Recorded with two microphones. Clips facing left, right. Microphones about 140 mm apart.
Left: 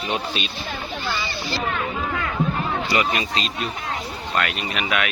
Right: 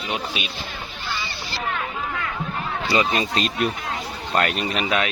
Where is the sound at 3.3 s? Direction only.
50° right (ahead or behind).